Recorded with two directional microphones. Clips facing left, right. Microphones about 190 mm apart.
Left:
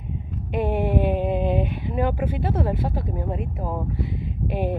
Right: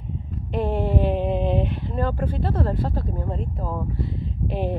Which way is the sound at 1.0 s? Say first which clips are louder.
Even; 5° left (ahead or behind).